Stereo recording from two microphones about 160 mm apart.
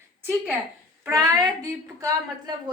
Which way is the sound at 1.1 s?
20° right (ahead or behind).